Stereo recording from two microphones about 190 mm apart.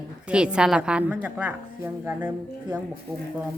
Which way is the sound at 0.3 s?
5° right (ahead or behind).